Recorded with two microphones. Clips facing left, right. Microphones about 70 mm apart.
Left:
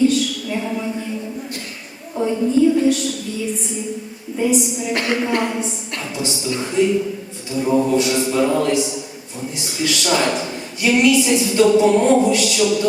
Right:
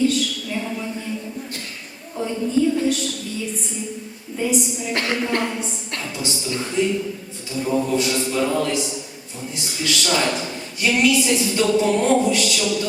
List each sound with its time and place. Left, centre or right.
0.5 s a sound: centre
2.1 s a woman's voice: centre
4.4 s a woman's voice: centre
4.9 s a woman's voice: left
6.1 s a woman's voice: centre